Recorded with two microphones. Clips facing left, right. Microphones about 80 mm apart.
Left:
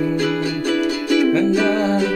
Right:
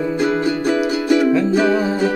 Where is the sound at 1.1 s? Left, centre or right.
Right.